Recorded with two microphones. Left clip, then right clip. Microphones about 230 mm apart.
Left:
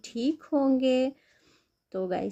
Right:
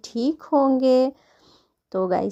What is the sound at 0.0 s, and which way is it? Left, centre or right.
A woman's voice, centre.